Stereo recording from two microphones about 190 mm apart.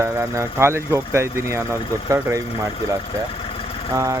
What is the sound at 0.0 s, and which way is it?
Speech, 15° right (ahead or behind).